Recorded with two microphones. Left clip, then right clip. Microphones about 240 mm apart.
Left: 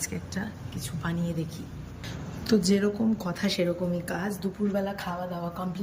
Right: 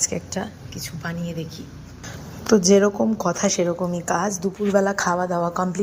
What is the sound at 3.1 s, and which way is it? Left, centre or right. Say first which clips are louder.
Speech: right 11 dB; centre.